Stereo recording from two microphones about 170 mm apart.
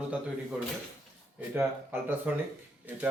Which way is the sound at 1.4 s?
10° right (ahead or behind).